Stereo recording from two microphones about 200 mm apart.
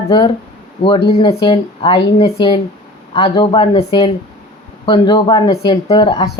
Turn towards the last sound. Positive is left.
turn(degrees=25)  # may be behind; listen again after turning